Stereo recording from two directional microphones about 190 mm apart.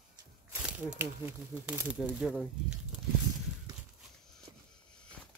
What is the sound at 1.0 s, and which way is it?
Speech, 10° right (ahead or behind).